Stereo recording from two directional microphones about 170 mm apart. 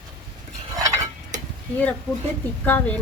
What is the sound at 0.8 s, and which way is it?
Stir, 20° right (ahead or behind).